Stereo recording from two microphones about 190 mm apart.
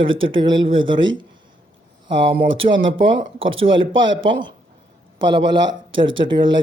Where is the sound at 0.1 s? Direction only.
90° right.